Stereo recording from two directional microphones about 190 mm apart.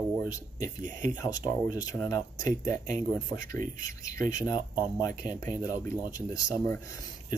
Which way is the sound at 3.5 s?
45° right (ahead or behind).